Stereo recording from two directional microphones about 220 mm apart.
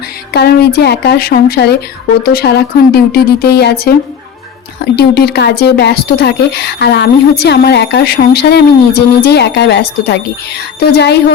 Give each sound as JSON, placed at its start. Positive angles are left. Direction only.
{"t": 0.3, "sound": "speech", "side_deg": 45}
{"t": 4.9, "sound": "speech", "side_deg": 45}